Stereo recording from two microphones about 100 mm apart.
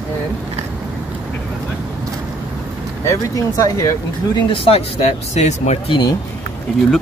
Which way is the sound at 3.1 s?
35° left (ahead or behind).